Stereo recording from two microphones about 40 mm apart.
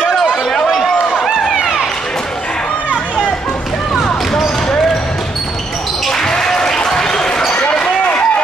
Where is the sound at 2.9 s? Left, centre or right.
Left.